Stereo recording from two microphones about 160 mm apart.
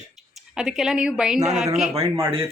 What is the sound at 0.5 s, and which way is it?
Speech, centre (ahead or behind).